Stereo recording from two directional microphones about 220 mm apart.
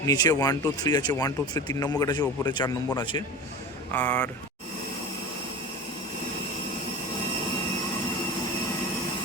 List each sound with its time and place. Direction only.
0.0 s speech: 15° left (ahead or behind)
3.9 s speech: 10° left (ahead or behind)